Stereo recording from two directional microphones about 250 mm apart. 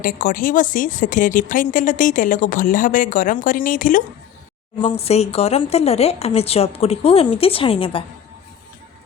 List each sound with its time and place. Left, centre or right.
0.0 s speech: left